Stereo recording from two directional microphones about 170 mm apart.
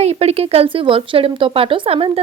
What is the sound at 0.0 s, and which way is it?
A woman's voice, 40° right (ahead or behind).